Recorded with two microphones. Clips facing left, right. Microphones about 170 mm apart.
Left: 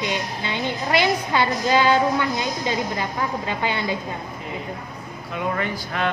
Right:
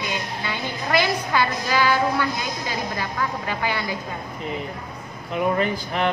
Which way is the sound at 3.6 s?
20° left (ahead or behind).